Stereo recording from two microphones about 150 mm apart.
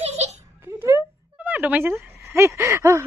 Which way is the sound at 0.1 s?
45° right (ahead or behind).